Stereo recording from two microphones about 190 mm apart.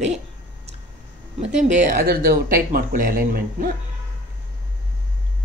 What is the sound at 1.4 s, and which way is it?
A woman's voice, 40° right (ahead or behind).